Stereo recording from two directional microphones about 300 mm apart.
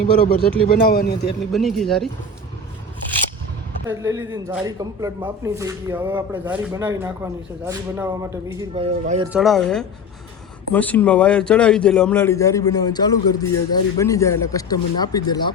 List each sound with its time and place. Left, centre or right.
0.0 s speech: left
1.5 s a man's voice: centre
3.8 s speech: centre
9.3 s a man's voice: centre